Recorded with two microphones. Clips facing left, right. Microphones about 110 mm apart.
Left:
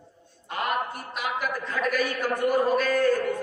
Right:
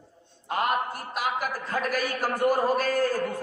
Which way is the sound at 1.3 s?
40° right (ahead or behind).